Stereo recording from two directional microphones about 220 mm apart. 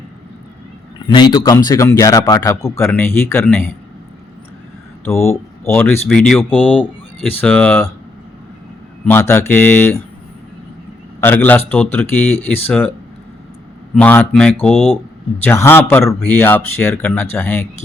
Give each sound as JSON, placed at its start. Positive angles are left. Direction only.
{"t": 1.0, "sound": "speech", "side_deg": 20}
{"t": 5.0, "sound": "speech", "side_deg": 10}
{"t": 9.0, "sound": "speech", "side_deg": 10}
{"t": 11.2, "sound": "speech", "side_deg": 10}
{"t": 13.9, "sound": "speech", "side_deg": 5}